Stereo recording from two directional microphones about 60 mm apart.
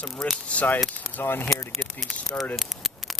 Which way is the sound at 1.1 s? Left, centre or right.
Left.